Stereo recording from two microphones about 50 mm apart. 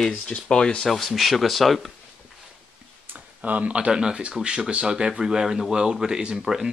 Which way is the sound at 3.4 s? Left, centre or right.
Right.